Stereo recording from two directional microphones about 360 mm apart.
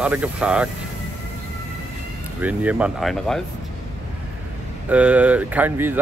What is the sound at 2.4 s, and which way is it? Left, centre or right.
Speech, centre.